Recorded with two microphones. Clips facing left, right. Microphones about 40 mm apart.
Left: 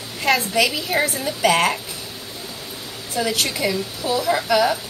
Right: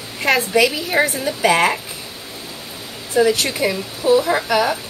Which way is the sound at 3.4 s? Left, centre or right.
Right.